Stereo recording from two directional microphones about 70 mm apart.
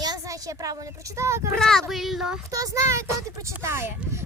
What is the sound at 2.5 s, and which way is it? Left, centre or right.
A child's voice, right.